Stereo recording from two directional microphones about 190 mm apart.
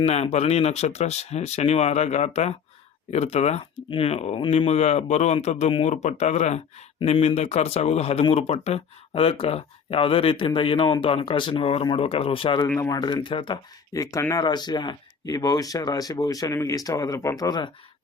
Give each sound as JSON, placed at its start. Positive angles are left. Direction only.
{"t": 0.0, "sound": "speech", "side_deg": 35}
{"t": 12.6, "sound": "speech", "side_deg": 10}
{"t": 12.9, "sound": "speech", "side_deg": 20}